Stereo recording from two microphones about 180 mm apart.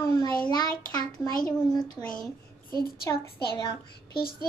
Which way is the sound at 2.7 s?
55° left (ahead or behind).